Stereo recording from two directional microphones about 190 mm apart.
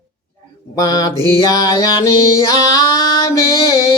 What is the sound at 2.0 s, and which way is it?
Female singing, 15° left (ahead or behind).